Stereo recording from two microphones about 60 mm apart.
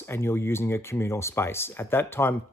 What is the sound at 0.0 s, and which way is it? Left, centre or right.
Speech, left.